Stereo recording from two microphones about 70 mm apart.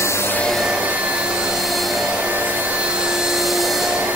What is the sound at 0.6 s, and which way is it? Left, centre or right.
Vacuum cleaner, centre.